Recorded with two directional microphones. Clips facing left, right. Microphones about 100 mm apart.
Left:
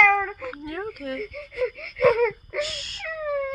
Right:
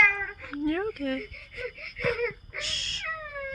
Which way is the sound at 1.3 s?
90° left.